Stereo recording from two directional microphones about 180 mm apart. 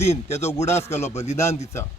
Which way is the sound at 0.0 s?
35° left (ahead or behind).